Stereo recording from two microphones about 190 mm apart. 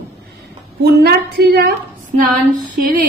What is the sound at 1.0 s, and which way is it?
Speech, 60° right (ahead or behind).